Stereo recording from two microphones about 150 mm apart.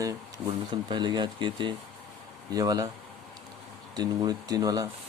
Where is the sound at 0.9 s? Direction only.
30° right (ahead or behind).